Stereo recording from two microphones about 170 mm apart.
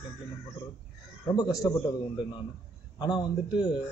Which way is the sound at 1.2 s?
20° left (ahead or behind).